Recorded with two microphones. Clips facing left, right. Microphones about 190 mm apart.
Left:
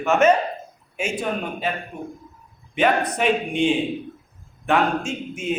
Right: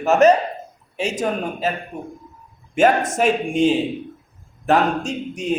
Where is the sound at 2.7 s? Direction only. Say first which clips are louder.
Right 4 dB; 45° right (ahead or behind).